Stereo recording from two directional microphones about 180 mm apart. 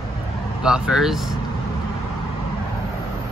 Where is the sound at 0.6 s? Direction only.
5° right (ahead or behind).